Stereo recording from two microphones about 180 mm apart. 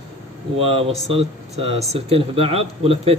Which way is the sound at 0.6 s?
30° right (ahead or behind).